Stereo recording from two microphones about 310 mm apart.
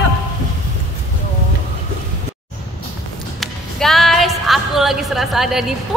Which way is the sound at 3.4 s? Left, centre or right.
Centre.